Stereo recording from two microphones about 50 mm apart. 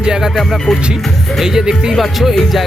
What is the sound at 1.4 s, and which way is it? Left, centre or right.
Music, centre.